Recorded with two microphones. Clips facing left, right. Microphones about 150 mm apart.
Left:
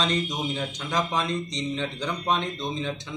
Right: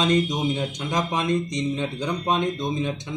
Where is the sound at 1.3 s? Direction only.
50° right (ahead or behind).